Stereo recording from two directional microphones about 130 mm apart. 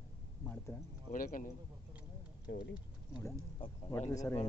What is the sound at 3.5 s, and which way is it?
Speech, 40° left (ahead or behind).